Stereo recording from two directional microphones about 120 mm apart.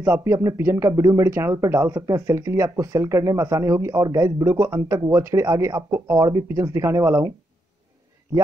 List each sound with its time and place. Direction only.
0.0 s speech: 20° right (ahead or behind)